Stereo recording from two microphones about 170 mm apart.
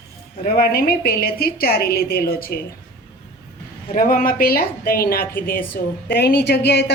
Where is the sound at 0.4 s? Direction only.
65° left (ahead or behind).